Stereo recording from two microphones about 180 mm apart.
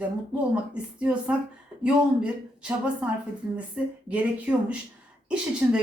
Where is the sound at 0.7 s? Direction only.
5° right (ahead or behind).